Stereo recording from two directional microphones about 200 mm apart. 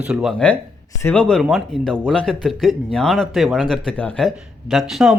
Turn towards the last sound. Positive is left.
turn(degrees=0)  # may be behind; listen again after turning